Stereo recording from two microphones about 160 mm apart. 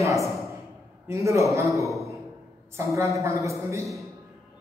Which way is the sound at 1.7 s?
Centre (ahead or behind).